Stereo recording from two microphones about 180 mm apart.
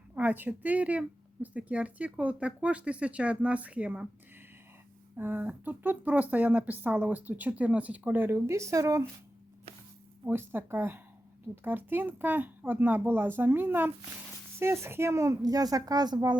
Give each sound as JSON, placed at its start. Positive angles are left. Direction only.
{"t": 0.1, "sound": "a woman's voice", "side_deg": -10}
{"t": 5.1, "sound": "a woman's voice", "side_deg": -10}
{"t": 10.2, "sound": "a woman's voice", "side_deg": -10}